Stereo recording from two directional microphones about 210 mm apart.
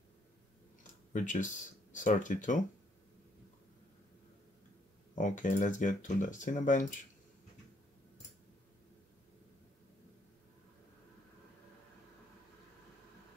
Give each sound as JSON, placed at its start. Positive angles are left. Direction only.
{"t": 1.1, "sound": "speech", "side_deg": 35}
{"t": 5.1, "sound": "speech", "side_deg": 40}